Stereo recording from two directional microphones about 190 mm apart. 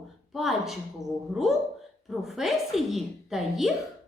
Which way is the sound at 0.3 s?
Centre (ahead or behind).